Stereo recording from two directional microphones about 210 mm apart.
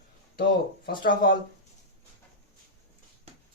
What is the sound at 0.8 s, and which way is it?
Speech, 45° left (ahead or behind).